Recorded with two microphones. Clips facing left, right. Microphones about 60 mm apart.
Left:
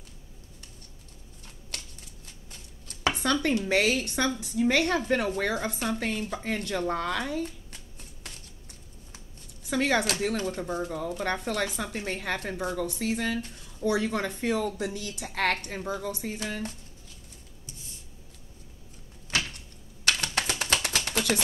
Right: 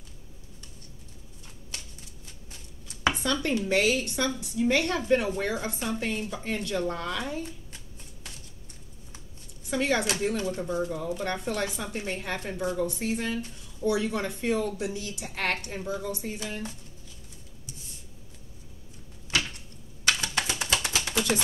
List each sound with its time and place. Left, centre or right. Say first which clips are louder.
3.2 s a woman's voice: left 2 dB; left
9.7 s a woman's voice: left 1 dB; left
11.4 s a woman's voice: left 1 dB; left
20.1 s a sound: even; left